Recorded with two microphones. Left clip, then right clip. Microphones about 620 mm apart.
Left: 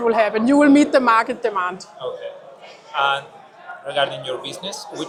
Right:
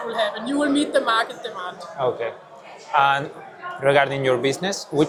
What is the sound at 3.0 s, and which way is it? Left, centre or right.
A man's voice, right.